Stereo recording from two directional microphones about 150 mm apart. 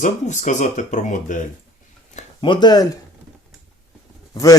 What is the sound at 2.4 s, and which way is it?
Speech, 30° left (ahead or behind).